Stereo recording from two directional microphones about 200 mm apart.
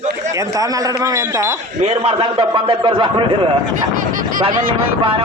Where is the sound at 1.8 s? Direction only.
30° right (ahead or behind).